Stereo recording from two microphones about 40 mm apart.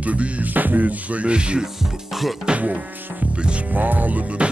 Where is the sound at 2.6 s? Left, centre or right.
Right.